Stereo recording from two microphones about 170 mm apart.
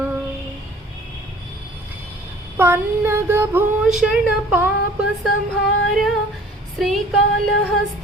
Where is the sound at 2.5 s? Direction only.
15° right (ahead or behind).